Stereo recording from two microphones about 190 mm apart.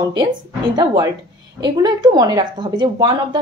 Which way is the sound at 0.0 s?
20° right (ahead or behind).